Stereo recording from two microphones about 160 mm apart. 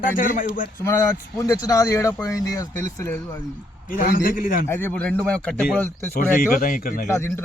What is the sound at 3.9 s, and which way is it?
Speech, 60° left (ahead or behind).